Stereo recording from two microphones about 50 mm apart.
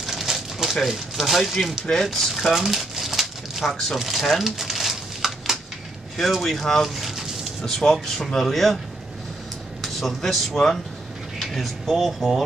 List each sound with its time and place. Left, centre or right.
0.0 s a sound: centre
0.8 s speech: centre
2.1 s crumpling: centre
3.9 s speech: centre
4.4 s a sound: centre
6.1 s speech: centre
9.8 s speech: centre